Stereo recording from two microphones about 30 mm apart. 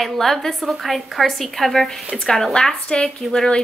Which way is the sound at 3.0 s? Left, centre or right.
Centre.